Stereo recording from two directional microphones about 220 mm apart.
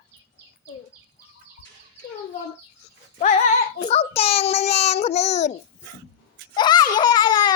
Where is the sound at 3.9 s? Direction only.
25° left (ahead or behind).